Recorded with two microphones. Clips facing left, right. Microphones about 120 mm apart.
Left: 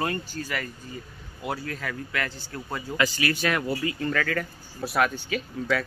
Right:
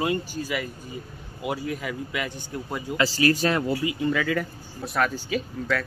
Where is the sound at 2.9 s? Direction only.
35° right (ahead or behind).